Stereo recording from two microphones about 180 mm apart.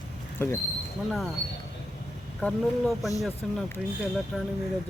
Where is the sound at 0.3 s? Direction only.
10° left (ahead or behind).